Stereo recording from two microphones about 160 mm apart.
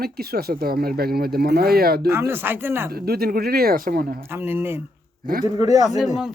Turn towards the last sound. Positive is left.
turn(degrees=-5)  # may be behind; listen again after turning